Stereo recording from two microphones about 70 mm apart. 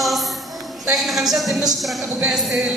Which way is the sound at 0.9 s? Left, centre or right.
Centre.